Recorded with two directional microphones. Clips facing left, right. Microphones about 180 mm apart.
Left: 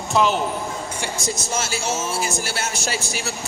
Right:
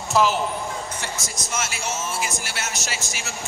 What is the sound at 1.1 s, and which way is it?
A man's voice, 30° left (ahead or behind).